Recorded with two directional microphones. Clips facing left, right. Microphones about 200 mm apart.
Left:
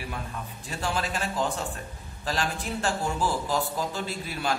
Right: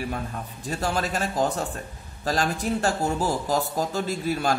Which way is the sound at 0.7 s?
40° right (ahead or behind).